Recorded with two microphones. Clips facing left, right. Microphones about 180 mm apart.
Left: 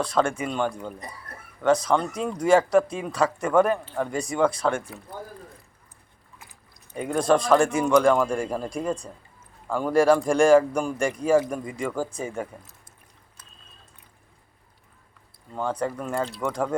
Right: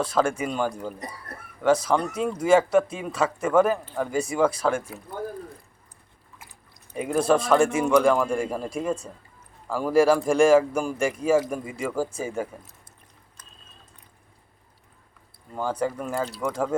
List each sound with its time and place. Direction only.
0.0 s a man's voice: 5° right (ahead or behind)
6.9 s a man's voice: 5° right (ahead or behind)
15.5 s a man's voice: 5° right (ahead or behind)